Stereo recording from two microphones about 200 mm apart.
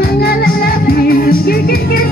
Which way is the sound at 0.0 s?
50° left (ahead or behind).